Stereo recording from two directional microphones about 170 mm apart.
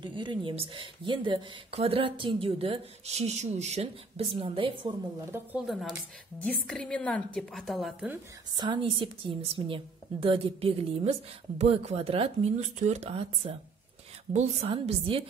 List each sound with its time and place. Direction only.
0.0 s speech: 25° right (ahead or behind)
5.7 s a woman's voice: centre (ahead or behind)
8.5 s a woman's voice: 30° right (ahead or behind)